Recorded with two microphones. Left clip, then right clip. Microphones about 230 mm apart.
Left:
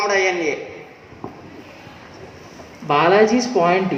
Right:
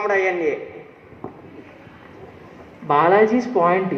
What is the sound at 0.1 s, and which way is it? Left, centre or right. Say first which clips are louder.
Speech: left 1 dB; left.